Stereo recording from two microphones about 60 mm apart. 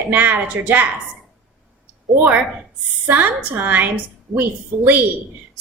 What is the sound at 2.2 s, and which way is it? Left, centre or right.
A woman's voice, right.